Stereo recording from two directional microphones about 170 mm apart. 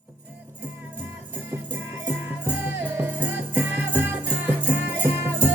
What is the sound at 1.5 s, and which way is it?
Music, 15° right (ahead or behind).